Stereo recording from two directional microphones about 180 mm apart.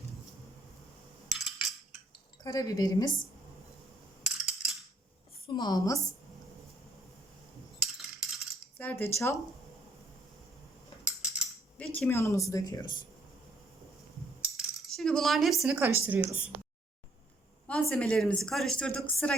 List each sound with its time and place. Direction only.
1.3 s a sound: centre (ahead or behind)
2.4 s speech: 20° left (ahead or behind)
4.2 s a sound: 5° right (ahead or behind)
5.5 s speech: 20° left (ahead or behind)
7.8 s coin: centre (ahead or behind)
8.8 s speech: 10° left (ahead or behind)
11.0 s a sound: 5° right (ahead or behind)
11.8 s speech: 10° left (ahead or behind)
14.5 s cutlery: centre (ahead or behind)
17.7 s a woman's voice: 5° left (ahead or behind)